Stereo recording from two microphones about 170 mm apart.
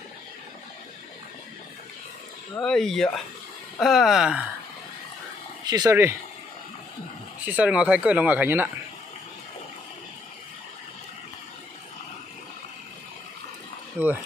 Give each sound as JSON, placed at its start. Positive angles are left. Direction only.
{"t": 2.5, "sound": "speech", "side_deg": 5}
{"t": 5.7, "sound": "speech", "side_deg": -20}
{"t": 7.4, "sound": "speech", "side_deg": -10}